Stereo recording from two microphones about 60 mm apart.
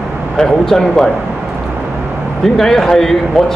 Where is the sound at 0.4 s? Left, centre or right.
Centre.